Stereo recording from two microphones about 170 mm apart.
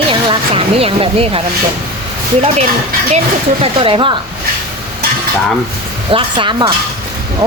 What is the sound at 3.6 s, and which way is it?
Speech, 30° right (ahead or behind).